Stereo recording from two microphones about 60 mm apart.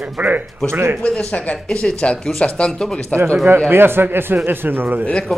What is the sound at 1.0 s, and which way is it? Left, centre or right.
Speech, centre.